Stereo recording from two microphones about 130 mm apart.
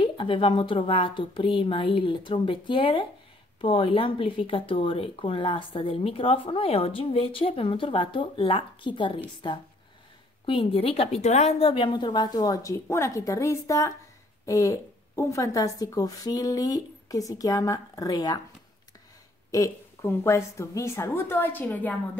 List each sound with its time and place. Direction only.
0.0 s a woman's voice: 40° left (ahead or behind)
10.4 s a woman's voice: 40° left (ahead or behind)
19.5 s a woman's voice: 25° left (ahead or behind)